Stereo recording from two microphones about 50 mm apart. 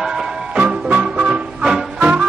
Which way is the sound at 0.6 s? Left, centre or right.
Right.